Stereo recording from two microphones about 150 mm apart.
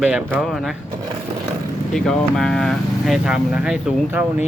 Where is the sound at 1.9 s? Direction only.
5° left (ahead or behind).